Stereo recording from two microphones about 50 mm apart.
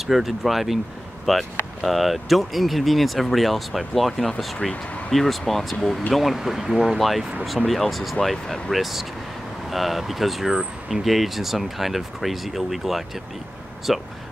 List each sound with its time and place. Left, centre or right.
0.0 s speech: centre